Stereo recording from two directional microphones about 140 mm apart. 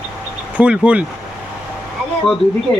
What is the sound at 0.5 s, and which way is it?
Speech, 10° right (ahead or behind).